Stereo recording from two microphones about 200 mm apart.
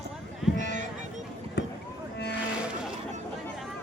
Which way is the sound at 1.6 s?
55° left (ahead or behind).